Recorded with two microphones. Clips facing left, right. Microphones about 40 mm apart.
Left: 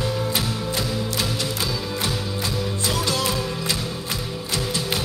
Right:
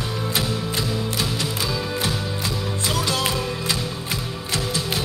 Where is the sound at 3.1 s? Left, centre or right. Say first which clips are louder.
Right 1 dB; right.